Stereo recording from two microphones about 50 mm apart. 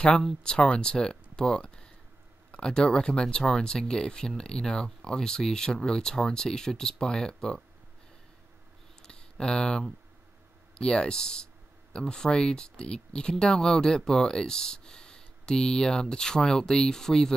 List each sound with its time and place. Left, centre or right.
0.4 s speech: centre
9.0 s a sound: centre
10.7 s speech: centre